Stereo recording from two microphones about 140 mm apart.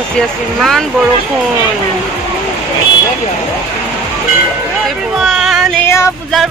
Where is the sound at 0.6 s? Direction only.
Centre (ahead or behind).